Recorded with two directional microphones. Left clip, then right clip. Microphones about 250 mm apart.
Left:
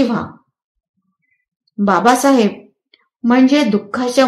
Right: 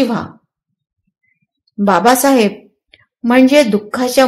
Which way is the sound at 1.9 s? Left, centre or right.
Right.